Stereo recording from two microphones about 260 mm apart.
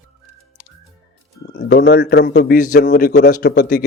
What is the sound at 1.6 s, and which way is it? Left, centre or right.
A man's voice, left.